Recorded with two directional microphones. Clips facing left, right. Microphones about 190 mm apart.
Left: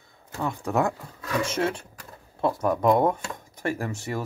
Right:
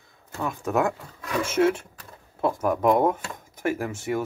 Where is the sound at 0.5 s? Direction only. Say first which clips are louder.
Right 1 dB; centre (ahead or behind).